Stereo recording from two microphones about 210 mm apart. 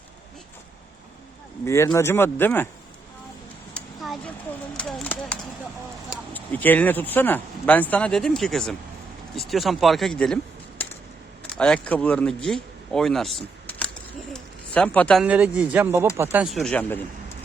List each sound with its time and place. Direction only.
1.6 s speech: 15° left (ahead or behind)
3.8 s a sound: centre (ahead or behind)
6.1 s speech: 10° left (ahead or behind)